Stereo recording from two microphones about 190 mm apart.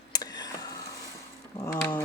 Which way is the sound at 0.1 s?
20° left (ahead or behind).